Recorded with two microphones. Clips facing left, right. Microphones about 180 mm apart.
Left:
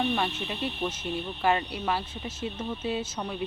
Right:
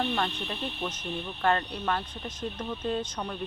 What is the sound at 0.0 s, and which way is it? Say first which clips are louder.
Speech: left 2 dB; 5° left (ahead or behind).